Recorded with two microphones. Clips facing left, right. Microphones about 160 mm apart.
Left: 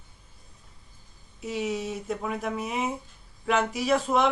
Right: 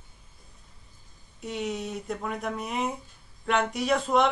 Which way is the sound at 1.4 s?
Centre (ahead or behind).